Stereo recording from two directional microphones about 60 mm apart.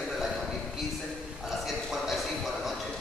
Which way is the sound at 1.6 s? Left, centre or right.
Centre.